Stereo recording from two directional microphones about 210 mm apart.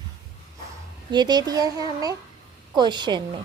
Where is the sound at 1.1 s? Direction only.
20° right (ahead or behind).